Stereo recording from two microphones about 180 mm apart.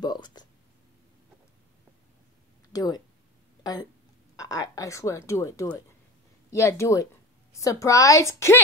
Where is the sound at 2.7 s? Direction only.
20° left (ahead or behind).